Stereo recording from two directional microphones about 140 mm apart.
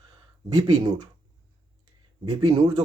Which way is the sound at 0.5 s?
30° right (ahead or behind).